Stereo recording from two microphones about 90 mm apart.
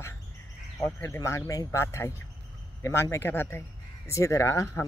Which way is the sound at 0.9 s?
30° left (ahead or behind).